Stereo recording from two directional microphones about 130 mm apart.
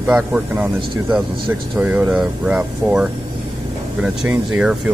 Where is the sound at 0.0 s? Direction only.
5° right (ahead or behind).